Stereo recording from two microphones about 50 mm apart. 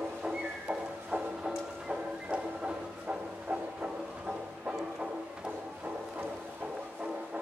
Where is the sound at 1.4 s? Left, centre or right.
Centre.